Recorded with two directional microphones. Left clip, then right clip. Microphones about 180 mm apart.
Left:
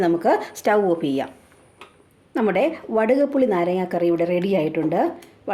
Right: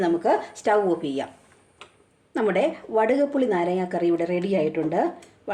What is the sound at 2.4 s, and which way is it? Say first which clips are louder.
A woman's voice: left 2 dB; 25° left (ahead or behind).